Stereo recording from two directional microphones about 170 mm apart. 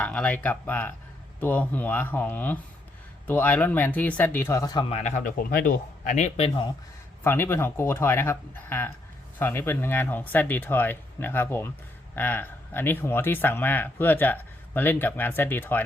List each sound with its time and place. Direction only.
0.0 s speech: 5° left (ahead or behind); by 4.9 s 25° left (ahead or behind)
4.9 s a man's voice: 40° left (ahead or behind)
7.3 s speech: 15° left (ahead or behind)